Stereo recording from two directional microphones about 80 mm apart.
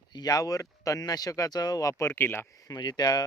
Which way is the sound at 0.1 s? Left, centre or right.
Left.